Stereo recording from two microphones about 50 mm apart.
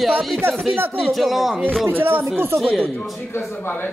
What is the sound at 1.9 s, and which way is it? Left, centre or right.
Speech, right.